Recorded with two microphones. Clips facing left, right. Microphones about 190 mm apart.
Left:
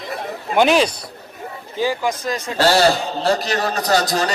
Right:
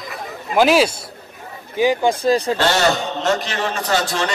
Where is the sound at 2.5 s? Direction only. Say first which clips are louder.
Left 2 dB; 35° left (ahead or behind).